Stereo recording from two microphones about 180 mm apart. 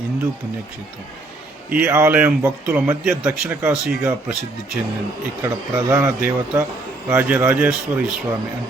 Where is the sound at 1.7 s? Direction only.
10° right (ahead or behind).